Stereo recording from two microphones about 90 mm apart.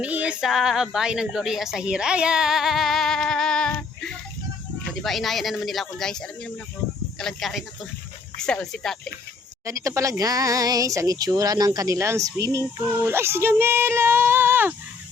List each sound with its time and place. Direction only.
0.0 s speech: 15° right (ahead or behind); by 9.0 s 5° left (ahead or behind)
9.6 s speech: 35° right (ahead or behind)